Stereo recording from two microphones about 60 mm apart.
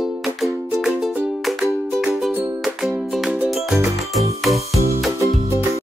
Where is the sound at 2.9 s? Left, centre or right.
Centre.